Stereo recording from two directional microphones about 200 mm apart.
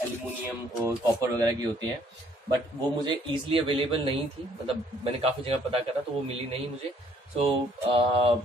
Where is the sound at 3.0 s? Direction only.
25° right (ahead or behind).